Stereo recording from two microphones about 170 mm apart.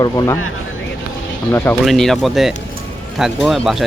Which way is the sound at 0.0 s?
20° left (ahead or behind).